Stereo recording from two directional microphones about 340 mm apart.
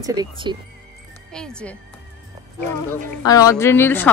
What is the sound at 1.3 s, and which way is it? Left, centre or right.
Speech, centre.